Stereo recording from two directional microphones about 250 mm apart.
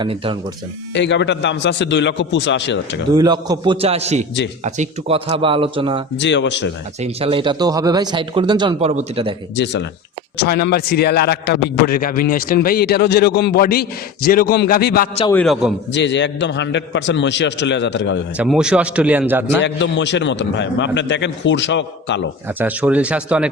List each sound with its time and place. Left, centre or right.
0.0 s speech: right
0.9 s a man's voice: left
3.2 s speech: centre
6.1 s a man's voice: left
7.0 s speech: right
10.3 s a man's voice: left
15.3 s a man's voice: centre
15.9 s a man's voice: left
18.3 s a man's voice: centre
19.6 s a man's voice: left
22.4 s a man's voice: centre